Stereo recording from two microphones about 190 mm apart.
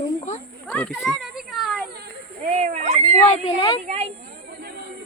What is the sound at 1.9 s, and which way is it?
Children playing, 55° right (ahead or behind).